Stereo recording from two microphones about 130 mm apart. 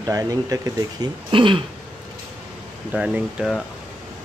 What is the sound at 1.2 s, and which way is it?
Speech, 40° right (ahead or behind).